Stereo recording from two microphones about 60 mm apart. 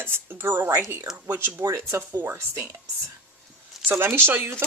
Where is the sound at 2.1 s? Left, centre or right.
Right.